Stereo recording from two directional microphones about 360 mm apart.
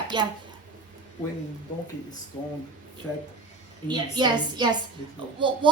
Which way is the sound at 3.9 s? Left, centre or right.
Centre.